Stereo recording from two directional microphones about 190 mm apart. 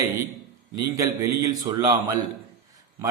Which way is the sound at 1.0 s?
20° right (ahead or behind).